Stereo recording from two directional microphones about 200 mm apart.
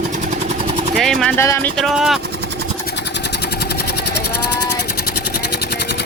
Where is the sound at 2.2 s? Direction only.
55° right (ahead or behind).